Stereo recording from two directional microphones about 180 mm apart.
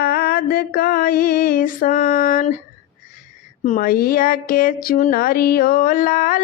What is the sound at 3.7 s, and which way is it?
Speech, 50° left (ahead or behind).